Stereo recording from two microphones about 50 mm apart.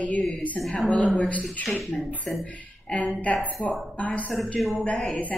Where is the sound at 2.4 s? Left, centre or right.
Left.